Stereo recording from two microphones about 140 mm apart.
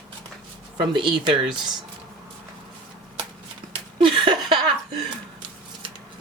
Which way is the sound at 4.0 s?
35° right (ahead or behind).